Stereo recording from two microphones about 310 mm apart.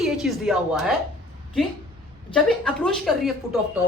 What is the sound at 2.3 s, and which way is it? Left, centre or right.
Speech, centre.